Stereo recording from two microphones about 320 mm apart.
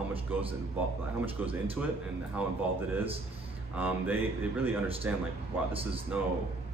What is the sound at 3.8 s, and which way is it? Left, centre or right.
Speech, centre.